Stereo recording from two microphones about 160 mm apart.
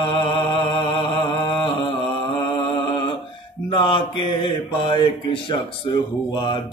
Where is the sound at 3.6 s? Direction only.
30° left (ahead or behind).